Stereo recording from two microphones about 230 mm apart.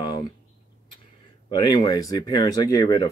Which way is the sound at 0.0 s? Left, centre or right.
Centre.